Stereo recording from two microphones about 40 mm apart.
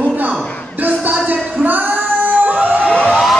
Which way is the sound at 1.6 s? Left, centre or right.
Right.